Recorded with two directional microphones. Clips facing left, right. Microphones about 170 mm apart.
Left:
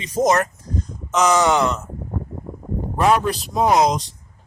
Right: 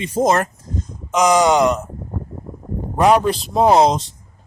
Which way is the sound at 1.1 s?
15° right (ahead or behind).